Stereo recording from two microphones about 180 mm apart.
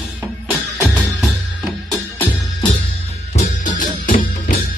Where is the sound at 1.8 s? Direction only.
10° left (ahead or behind).